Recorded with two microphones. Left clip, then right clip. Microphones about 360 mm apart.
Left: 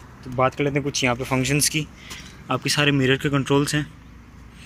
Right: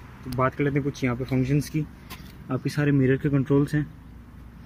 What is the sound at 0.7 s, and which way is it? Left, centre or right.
Speech, left.